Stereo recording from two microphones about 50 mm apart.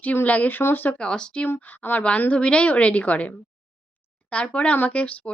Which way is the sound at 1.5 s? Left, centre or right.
Left.